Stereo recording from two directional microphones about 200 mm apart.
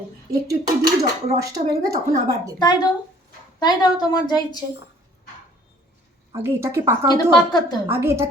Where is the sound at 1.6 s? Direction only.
30° right (ahead or behind).